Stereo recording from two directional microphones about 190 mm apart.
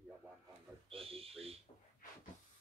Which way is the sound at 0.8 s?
30° right (ahead or behind).